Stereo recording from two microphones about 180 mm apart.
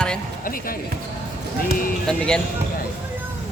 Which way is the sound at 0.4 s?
50° left (ahead or behind).